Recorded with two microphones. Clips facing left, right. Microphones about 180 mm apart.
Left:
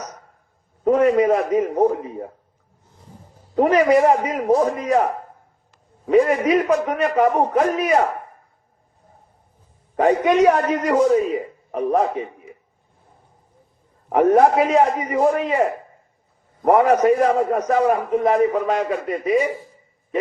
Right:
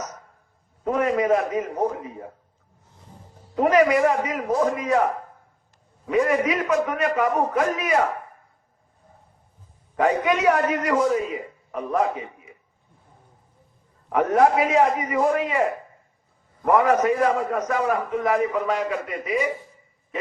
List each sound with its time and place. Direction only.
0.9 s a man's voice: 30° left (ahead or behind)
3.5 s a man's voice: 35° left (ahead or behind)
10.0 s a man's voice: 30° left (ahead or behind)
14.1 s a man's voice: 35° left (ahead or behind)
16.6 s a man's voice: 30° left (ahead or behind)